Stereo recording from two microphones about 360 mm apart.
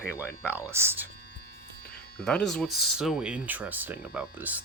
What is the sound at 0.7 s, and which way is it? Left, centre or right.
Speech, centre.